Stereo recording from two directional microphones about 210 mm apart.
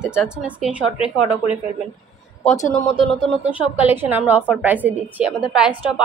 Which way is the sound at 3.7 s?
10° right (ahead or behind).